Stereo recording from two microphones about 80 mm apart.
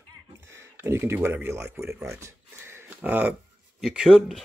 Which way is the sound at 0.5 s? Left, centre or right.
Right.